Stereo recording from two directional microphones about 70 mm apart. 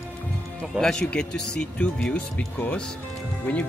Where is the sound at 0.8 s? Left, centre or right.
Centre.